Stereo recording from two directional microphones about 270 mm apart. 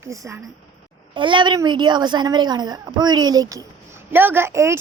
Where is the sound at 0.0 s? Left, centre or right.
Centre.